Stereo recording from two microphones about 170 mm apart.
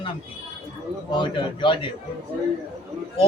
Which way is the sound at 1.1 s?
30° left (ahead or behind).